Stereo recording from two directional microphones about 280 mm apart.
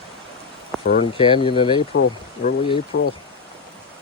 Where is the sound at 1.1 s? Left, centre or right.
Centre.